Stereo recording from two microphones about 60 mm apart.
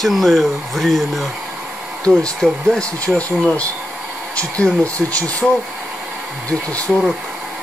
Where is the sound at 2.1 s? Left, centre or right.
Centre.